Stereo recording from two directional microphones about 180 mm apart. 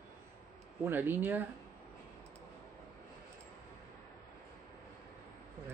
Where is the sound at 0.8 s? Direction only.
10° right (ahead or behind).